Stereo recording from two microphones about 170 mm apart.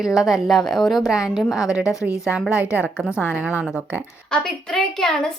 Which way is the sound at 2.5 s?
10° right (ahead or behind).